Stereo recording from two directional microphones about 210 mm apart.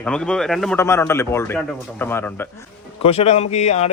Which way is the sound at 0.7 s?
10° left (ahead or behind).